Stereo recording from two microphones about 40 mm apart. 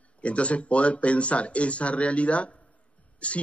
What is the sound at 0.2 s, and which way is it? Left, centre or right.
A man's voice, left.